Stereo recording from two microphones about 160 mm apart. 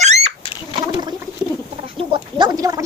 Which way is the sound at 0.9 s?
25° right (ahead or behind).